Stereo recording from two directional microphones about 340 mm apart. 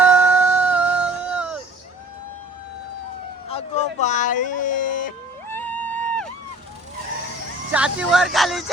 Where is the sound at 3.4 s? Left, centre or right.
Centre.